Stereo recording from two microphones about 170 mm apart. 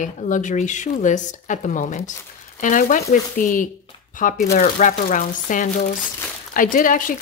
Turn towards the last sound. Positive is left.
turn(degrees=50)  # may be behind; listen again after turning